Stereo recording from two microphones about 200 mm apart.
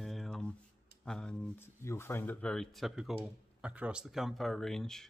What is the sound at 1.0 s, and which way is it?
Speech, 5° left (ahead or behind).